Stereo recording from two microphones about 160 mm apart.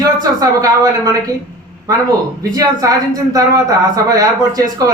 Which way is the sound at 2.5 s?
20° right (ahead or behind).